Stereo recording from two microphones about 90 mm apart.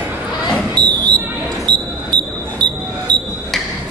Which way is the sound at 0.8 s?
50° right (ahead or behind).